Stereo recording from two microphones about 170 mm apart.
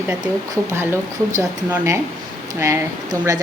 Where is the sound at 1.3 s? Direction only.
15° right (ahead or behind).